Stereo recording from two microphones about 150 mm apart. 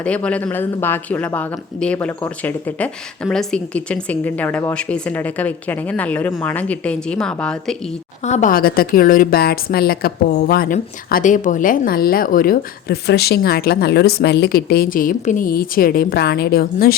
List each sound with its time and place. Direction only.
0.0 s speech: 10° left (ahead or behind)
8.2 s a woman's voice: 50° left (ahead or behind); by 16.9 s 90° left